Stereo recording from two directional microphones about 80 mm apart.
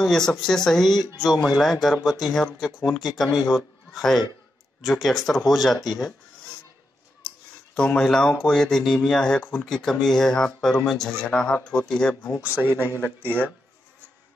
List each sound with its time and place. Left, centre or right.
0.0 s speech: centre
7.2 s speech: centre
12.4 s a man's voice: right
12.8 s speech: left